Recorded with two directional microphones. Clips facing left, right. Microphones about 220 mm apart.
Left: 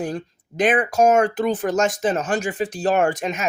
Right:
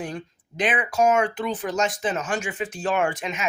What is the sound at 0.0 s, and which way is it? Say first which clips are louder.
Speech: left 5 dB; 45° left (ahead or behind).